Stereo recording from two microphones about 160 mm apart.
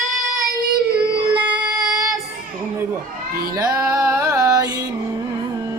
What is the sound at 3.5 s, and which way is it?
Music, 25° right (ahead or behind).